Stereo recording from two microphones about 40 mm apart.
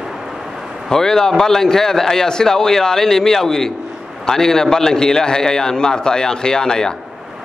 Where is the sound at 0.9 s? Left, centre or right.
Centre.